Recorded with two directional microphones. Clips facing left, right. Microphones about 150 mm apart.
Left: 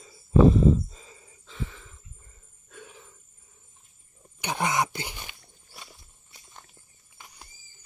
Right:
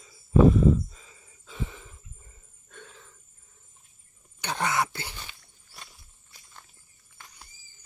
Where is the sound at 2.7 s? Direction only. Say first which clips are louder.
Left 2 dB; 10° left (ahead or behind).